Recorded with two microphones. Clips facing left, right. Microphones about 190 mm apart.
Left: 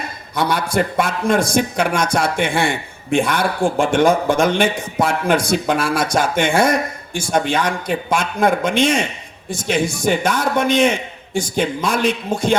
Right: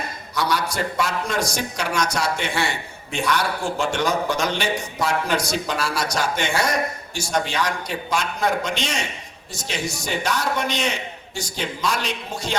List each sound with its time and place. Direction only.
0.3 s a man's voice: 55° left (ahead or behind)